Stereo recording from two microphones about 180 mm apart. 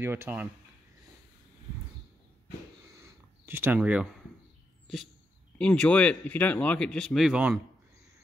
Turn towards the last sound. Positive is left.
turn(degrees=-5)  # may be behind; listen again after turning